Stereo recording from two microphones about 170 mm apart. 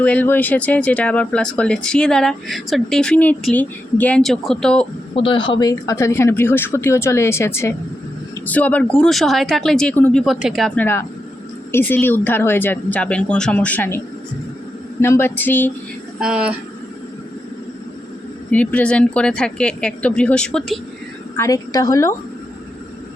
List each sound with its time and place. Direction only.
0.0 s speech: 10° left (ahead or behind)
5.1 s speech: 30° left (ahead or behind); by 10.7 s centre (ahead or behind)
10.8 s speech: 15° left (ahead or behind)
15.0 s speech: 15° left (ahead or behind)
16.2 s speech: 5° right (ahead or behind)
18.5 s speech: 10° left (ahead or behind)
21.3 s a woman's voice: 20° left (ahead or behind)